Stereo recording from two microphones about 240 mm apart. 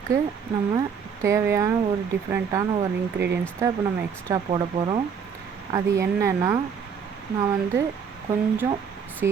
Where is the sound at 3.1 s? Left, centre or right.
Right.